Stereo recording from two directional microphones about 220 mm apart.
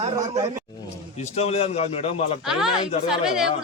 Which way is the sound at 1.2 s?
30° left (ahead or behind).